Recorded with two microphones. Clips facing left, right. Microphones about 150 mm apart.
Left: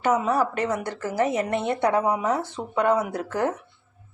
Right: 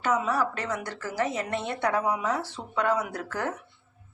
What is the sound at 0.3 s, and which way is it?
Speech, 25° left (ahead or behind).